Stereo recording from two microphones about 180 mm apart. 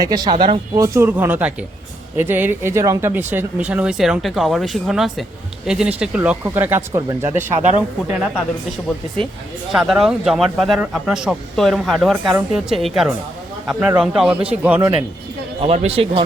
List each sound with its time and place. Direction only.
0.0 s speech: 20° right (ahead or behind)
0.9 s speech: 15° right (ahead or behind)
9.7 s speech: centre (ahead or behind)
15.6 s speech: 30° right (ahead or behind)